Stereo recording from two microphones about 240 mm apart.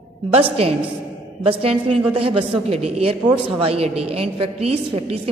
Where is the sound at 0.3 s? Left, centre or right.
Right.